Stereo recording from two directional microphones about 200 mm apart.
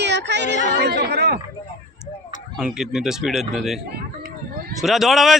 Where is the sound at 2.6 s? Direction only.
5° right (ahead or behind).